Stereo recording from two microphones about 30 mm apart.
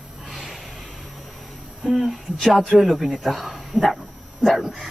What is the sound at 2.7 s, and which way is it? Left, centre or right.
Speech, centre.